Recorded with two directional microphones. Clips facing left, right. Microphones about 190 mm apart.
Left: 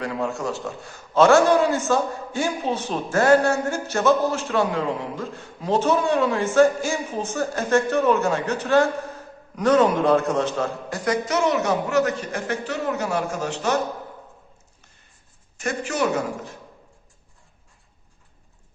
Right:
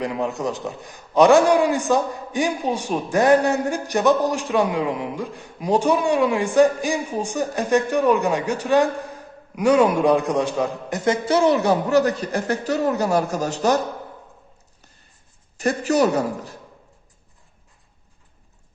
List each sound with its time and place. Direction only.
0.0 s a man's voice: 20° right (ahead or behind); by 13.7 s 40° right (ahead or behind)
15.5 s speech: 35° right (ahead or behind)